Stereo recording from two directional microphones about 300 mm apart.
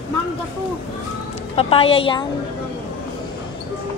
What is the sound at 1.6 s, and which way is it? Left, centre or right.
Speech, centre.